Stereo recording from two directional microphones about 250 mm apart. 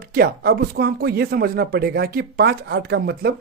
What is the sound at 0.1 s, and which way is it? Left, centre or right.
Speech, right.